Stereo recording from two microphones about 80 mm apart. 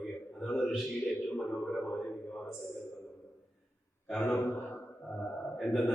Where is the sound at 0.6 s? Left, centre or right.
Centre.